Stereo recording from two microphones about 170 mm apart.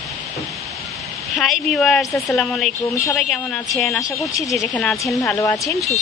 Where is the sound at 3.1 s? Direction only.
Centre (ahead or behind).